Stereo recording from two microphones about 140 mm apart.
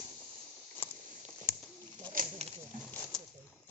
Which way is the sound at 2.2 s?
75° right (ahead or behind).